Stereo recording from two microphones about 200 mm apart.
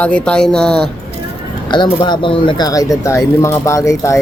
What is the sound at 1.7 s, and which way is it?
Speech, 20° left (ahead or behind).